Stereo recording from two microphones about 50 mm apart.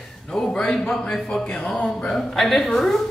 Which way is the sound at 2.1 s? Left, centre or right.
Centre.